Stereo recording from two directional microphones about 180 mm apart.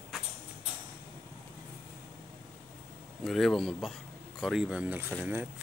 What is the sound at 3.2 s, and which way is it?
Speech, centre (ahead or behind).